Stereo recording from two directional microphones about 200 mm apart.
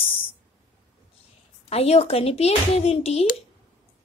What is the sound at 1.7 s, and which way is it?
Speech, 30° left (ahead or behind).